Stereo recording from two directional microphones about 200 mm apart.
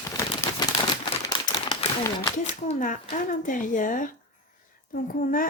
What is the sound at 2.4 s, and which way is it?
Speech, 40° left (ahead or behind).